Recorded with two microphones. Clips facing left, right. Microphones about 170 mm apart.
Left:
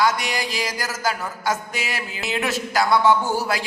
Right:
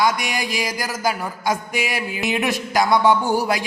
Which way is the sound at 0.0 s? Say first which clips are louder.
Right 1 dB; 15° right (ahead or behind).